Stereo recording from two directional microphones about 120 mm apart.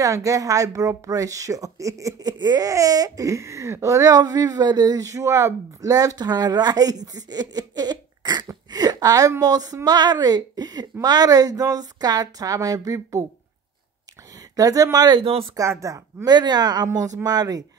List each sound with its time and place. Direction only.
0.0 s speech: 25° right (ahead or behind)
14.5 s speech: 30° right (ahead or behind)
15.2 s speech: 50° right (ahead or behind)
15.5 s speech: 25° right (ahead or behind)